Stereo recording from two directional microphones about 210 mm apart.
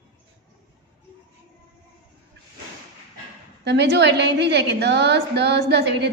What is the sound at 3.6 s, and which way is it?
A woman's voice, 55° right (ahead or behind).